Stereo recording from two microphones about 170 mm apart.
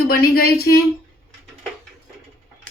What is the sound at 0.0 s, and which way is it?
Speech, 65° left (ahead or behind).